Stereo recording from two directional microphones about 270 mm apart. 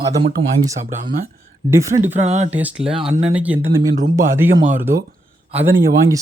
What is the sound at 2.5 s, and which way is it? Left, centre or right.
Speech, centre.